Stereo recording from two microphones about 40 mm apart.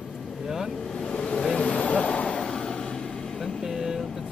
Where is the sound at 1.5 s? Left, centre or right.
Left.